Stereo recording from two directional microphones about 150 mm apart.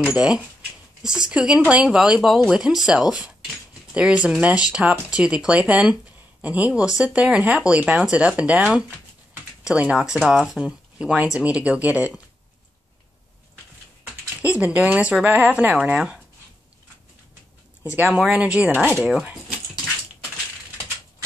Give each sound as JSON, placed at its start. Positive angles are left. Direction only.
{"t": 0.0, "sound": "speech", "side_deg": -5}
{"t": 14.4, "sound": "speech", "side_deg": -10}
{"t": 17.9, "sound": "speech", "side_deg": -10}